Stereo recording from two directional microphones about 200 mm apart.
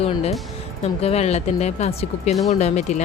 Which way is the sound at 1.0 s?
30° left (ahead or behind).